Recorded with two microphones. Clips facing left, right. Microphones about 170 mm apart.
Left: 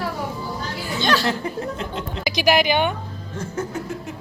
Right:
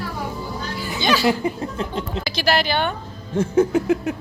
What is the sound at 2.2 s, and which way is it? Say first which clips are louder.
Speech: left 3 dB; 15° left (ahead or behind).